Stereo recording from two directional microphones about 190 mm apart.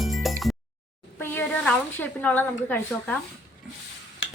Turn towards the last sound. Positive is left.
turn(degrees=80)